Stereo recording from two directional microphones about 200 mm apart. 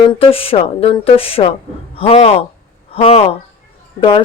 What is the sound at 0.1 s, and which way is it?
Speech, 30° left (ahead or behind).